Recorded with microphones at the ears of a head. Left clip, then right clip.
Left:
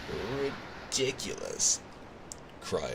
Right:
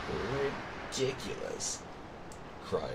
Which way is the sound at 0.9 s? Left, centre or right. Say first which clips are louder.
Left 3 dB; left.